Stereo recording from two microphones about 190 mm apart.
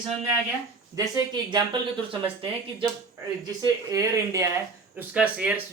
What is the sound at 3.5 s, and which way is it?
Speech, 20° right (ahead or behind).